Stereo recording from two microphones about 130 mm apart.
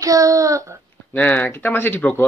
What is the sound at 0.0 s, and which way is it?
Speech, 25° right (ahead or behind).